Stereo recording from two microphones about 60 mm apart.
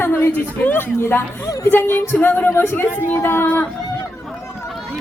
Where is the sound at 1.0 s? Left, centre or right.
Left.